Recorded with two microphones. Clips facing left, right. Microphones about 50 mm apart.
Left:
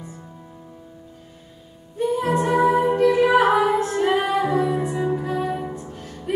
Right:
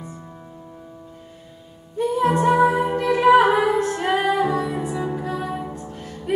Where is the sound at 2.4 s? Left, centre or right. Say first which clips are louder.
Left 1 dB; centre.